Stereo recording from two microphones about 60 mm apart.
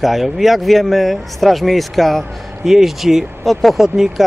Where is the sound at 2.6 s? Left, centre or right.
Centre.